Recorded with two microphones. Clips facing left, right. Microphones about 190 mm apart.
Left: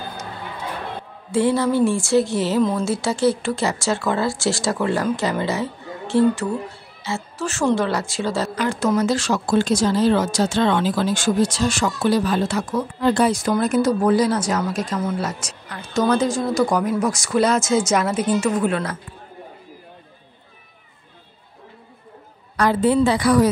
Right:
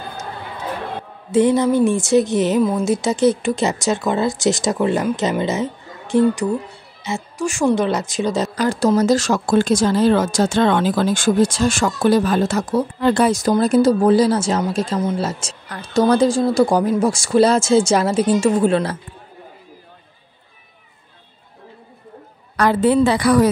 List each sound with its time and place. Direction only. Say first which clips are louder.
1.3 s speech: right 4 dB; 20° right (ahead or behind)
8.5 s speech: right 4 dB; 35° right (ahead or behind)
13.0 s a woman's voice: right 1 dB; 60° right (ahead or behind)
13.3 s speech: right 4 dB; 40° right (ahead or behind)
15.7 s a woman's voice: right 4 dB; 35° right (ahead or behind)
22.6 s a woman's voice: right 2 dB; 65° right (ahead or behind)